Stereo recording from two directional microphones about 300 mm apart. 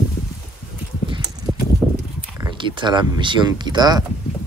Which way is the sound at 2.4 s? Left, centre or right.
Centre.